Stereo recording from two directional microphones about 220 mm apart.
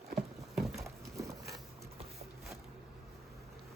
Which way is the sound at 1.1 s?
15° right (ahead or behind).